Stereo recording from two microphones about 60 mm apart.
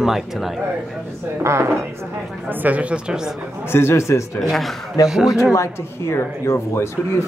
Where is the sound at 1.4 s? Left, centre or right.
Right.